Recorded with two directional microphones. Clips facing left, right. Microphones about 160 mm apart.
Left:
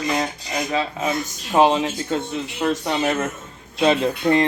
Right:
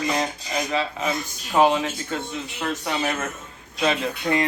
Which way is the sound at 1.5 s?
25° left (ahead or behind).